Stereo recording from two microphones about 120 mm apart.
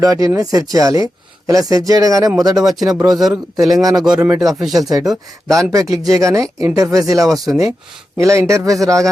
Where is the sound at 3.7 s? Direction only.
30° right (ahead or behind).